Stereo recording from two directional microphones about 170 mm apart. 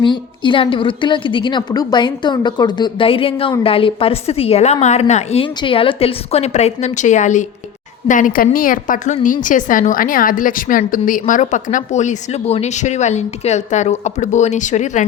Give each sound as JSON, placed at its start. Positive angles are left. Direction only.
{"t": 0.0, "sound": "a woman's voice", "side_deg": 30}